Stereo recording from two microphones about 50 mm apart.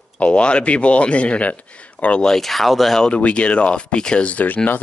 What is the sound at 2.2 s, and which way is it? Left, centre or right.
Speech, centre.